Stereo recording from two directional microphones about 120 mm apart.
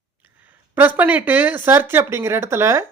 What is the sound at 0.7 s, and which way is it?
Speech, 15° right (ahead or behind).